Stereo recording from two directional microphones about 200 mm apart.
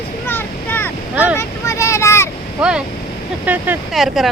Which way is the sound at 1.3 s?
15° left (ahead or behind).